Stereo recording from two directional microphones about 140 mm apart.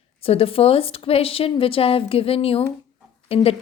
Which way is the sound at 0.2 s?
45° left (ahead or behind).